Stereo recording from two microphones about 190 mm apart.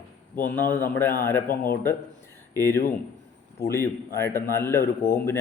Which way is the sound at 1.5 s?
50° left (ahead or behind).